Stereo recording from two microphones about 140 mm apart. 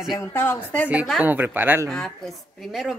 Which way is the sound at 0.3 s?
15° left (ahead or behind).